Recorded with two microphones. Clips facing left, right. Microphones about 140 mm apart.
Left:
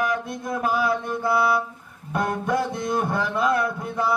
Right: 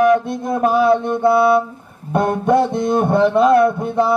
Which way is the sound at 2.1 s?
25° right (ahead or behind).